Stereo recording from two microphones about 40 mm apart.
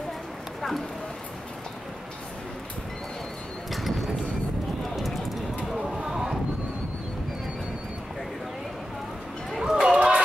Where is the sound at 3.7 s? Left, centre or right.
Centre.